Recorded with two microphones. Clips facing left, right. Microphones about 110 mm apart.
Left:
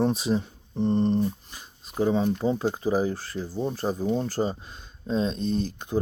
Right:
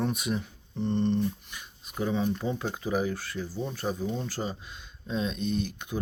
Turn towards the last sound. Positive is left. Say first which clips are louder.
# left 5 dB
turn(degrees=35)  # may be behind; listen again after turning